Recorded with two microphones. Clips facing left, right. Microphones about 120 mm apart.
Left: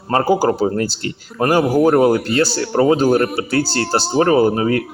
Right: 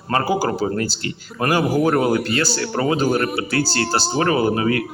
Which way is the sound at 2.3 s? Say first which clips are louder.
Left 4 dB; 30° left (ahead or behind).